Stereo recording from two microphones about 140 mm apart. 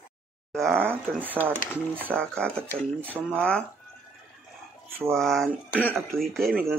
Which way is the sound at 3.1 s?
15° right (ahead or behind).